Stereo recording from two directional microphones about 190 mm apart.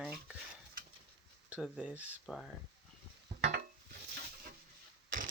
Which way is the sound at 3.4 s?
55° right (ahead or behind).